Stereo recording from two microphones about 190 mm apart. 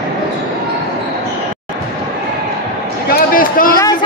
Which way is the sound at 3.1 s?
45° left (ahead or behind).